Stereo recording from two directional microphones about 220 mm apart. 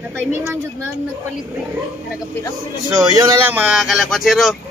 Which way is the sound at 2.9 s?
15° right (ahead or behind).